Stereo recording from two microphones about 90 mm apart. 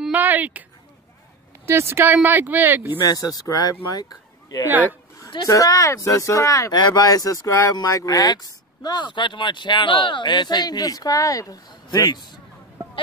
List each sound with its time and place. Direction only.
0.1 s a sound: 20° right (ahead or behind)
1.7 s speech: 30° right (ahead or behind)
3.1 s speech: 45° left (ahead or behind)
4.6 s speech: 20° right (ahead or behind)
5.5 s speech: 40° left (ahead or behind)
6.8 s a man's voice: 50° left (ahead or behind)